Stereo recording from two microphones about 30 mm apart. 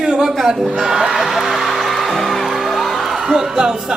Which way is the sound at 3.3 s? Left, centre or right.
Centre.